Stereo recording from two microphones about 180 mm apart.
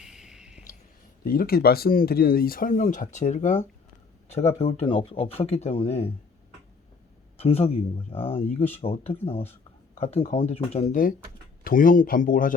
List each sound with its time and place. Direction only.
0.0 s music: 5° right (ahead or behind)
1.2 s speech: 55° left (ahead or behind); by 6.1 s 35° left (ahead or behind)
7.3 s speech: 35° left (ahead or behind)
11.6 s speech: 50° left (ahead or behind)